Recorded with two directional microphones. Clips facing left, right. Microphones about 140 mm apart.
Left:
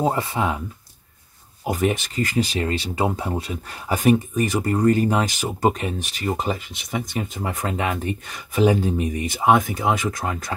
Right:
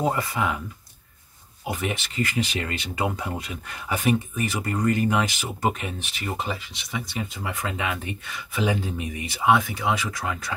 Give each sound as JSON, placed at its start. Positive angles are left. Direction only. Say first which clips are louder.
{"t": 0.0, "sound": "speech", "louder": "left 3 dB", "side_deg": 25}
{"t": 1.7, "sound": "speech", "louder": "left 7 dB", "side_deg": 40}